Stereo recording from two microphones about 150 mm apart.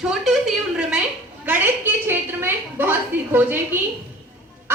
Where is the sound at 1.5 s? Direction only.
15° right (ahead or behind).